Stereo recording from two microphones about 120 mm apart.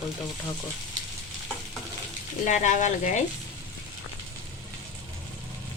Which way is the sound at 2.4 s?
90° left.